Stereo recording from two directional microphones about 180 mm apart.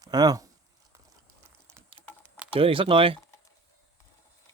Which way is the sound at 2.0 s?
25° left (ahead or behind).